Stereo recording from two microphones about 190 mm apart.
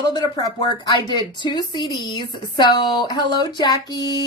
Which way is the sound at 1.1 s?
25° left (ahead or behind).